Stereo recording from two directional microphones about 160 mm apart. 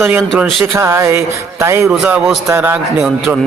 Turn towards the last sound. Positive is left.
turn(degrees=-5)  # may be behind; listen again after turning